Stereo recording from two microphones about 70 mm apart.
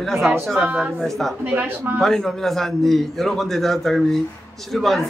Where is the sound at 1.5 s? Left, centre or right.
Right.